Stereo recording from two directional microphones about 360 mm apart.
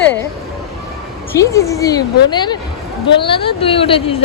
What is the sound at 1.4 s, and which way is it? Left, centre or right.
A woman's voice, centre.